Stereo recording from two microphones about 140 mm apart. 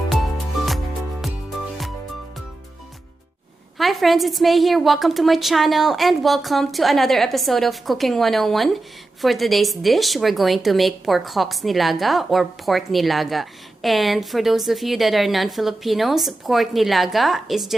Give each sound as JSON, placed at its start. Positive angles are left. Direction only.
{"t": 0.1, "sound": "music", "side_deg": 0}
{"t": 3.8, "sound": "speech", "side_deg": 0}